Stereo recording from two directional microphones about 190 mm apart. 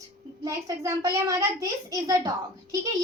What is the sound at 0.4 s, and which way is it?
A child's voice, 15° right (ahead or behind).